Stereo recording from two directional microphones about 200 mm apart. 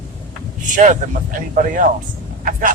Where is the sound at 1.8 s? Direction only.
40° right (ahead or behind).